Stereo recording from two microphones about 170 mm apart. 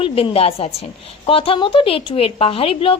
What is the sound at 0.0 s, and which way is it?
A woman's voice, 35° left (ahead or behind).